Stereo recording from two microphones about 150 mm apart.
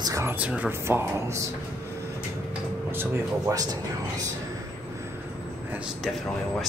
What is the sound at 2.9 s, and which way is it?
Speech, 20° right (ahead or behind).